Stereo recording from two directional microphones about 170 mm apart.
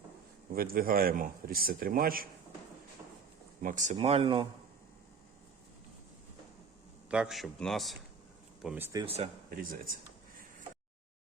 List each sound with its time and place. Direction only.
0.5 s a man's voice: 60° right (ahead or behind)
3.6 s speech: 50° right (ahead or behind)
3.9 s speech: 35° right (ahead or behind)
7.1 s a man's voice: 5° right (ahead or behind)
9.0 s speech: 40° right (ahead or behind)